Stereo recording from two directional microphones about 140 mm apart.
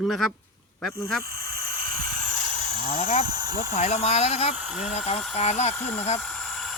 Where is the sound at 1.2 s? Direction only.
90° right.